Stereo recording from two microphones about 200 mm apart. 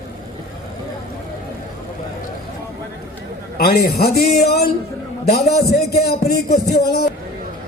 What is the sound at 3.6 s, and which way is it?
Music, 50° left (ahead or behind).